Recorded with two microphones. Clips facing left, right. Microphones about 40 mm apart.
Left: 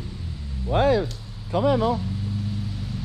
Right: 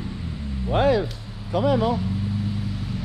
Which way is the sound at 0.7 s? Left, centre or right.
Right.